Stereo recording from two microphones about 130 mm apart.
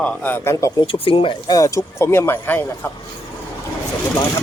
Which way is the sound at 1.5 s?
25° left (ahead or behind).